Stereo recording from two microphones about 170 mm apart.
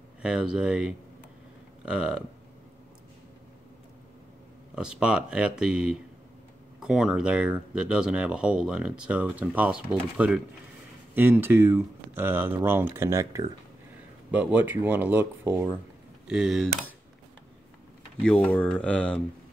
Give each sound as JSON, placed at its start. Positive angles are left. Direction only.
{"t": 0.2, "sound": "speech", "side_deg": -5}
{"t": 4.7, "sound": "speech", "side_deg": -5}
{"t": 18.2, "sound": "speech", "side_deg": 10}